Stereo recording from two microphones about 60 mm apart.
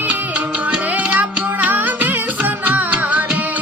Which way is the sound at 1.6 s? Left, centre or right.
Right.